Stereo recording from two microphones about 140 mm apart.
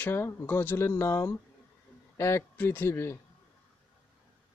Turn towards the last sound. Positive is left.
turn(degrees=20)  # may be behind; listen again after turning